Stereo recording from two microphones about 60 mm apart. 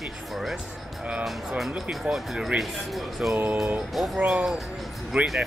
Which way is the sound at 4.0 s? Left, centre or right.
Centre.